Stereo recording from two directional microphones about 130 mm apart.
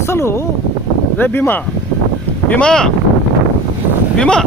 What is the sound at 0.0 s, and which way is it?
Speech, 20° left (ahead or behind).